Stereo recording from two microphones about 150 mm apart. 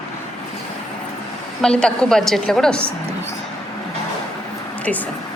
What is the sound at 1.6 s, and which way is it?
A woman's voice, 5° left (ahead or behind).